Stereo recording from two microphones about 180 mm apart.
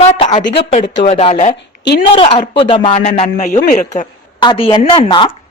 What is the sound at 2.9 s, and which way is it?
Speech, 40° left (ahead or behind).